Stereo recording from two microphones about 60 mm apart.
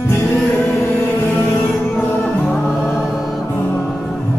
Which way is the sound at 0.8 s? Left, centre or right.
Left.